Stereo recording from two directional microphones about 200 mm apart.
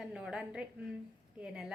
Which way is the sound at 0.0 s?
5° right (ahead or behind).